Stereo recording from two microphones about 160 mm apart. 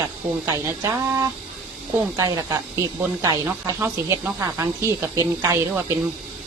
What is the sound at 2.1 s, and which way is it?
Speech, 20° right (ahead or behind).